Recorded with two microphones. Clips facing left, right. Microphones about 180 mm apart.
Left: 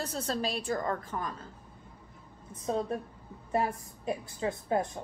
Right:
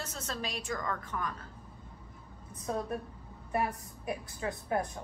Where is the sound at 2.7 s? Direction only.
25° left (ahead or behind).